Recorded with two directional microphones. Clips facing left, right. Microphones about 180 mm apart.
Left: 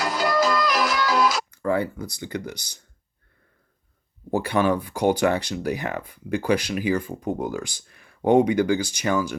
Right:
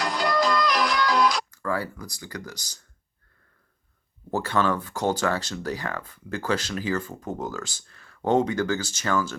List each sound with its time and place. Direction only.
0.0 s music: 5° left (ahead or behind)
1.5 s speech: 20° left (ahead or behind)
4.3 s speech: 15° left (ahead or behind)